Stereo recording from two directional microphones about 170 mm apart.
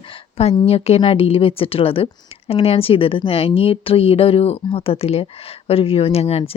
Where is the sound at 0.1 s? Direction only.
35° left (ahead or behind).